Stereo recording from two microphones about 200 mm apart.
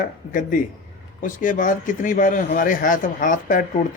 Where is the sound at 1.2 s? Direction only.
40° left (ahead or behind).